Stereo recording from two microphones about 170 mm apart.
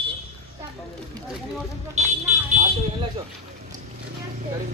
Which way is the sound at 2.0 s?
40° right (ahead or behind).